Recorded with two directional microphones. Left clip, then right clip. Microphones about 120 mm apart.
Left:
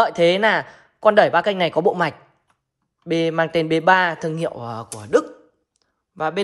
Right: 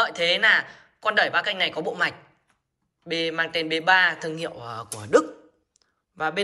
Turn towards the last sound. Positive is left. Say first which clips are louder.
# left 3 dB
turn(degrees=55)  # may be behind; listen again after turning